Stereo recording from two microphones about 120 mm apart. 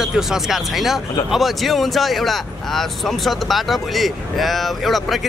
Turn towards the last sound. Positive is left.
turn(degrees=0)  # may be behind; listen again after turning